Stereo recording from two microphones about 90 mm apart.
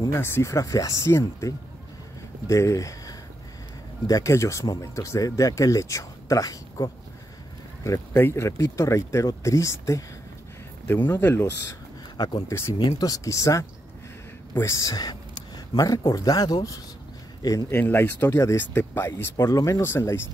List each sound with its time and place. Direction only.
0.1 s speech: 30° left (ahead or behind)
7.8 s speech: 35° left (ahead or behind)
17.6 s speech: 25° left (ahead or behind)